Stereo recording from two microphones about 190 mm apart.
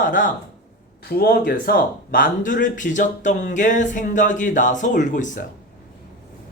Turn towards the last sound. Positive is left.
turn(degrees=45)  # may be behind; listen again after turning